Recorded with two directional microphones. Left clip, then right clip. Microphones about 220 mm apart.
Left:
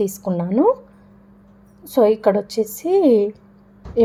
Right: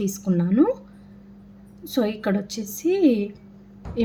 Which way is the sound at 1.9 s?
10° left (ahead or behind).